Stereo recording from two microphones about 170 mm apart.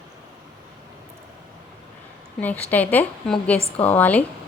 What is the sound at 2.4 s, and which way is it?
A woman's voice, 10° left (ahead or behind).